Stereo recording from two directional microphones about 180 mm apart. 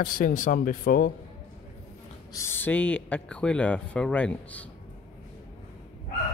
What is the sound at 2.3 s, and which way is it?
Speech, 15° left (ahead or behind).